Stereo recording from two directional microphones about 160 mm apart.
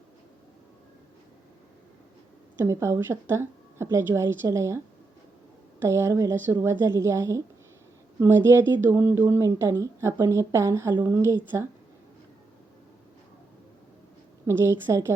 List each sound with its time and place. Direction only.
2.6 s a woman's voice: 15° right (ahead or behind)
5.8 s a woman's voice: 15° right (ahead or behind)
14.4 s a woman's voice: 15° right (ahead or behind)